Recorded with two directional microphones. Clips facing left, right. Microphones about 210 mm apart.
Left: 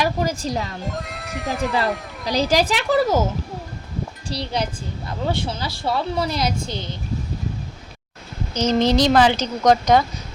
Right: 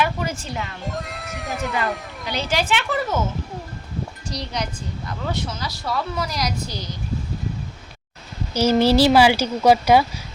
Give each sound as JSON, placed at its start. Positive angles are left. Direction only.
{"t": 0.0, "sound": "a child's voice", "side_deg": 35}
{"t": 0.9, "sound": "speech", "side_deg": 0}
{"t": 2.2, "sound": "a child's voice", "side_deg": 35}
{"t": 4.3, "sound": "a woman's voice", "side_deg": 30}
{"t": 8.5, "sound": "a woman's voice", "side_deg": -10}